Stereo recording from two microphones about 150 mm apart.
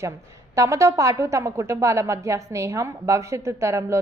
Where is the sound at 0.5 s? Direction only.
20° right (ahead or behind).